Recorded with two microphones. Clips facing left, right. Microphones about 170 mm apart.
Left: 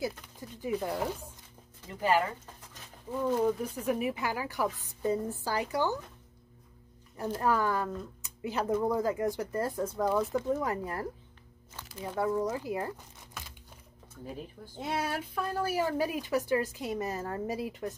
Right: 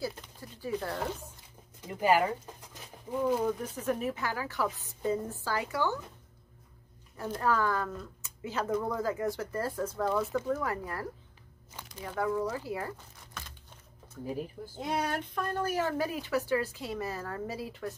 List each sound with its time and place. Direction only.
0.0 s speech: 15° left (ahead or behind)
1.8 s speech: 15° right (ahead or behind)
3.4 s speech: 10° left (ahead or behind)
7.4 s speech: 15° left (ahead or behind)
12.2 s speech: 20° left (ahead or behind)
14.8 s speech: 5° left (ahead or behind)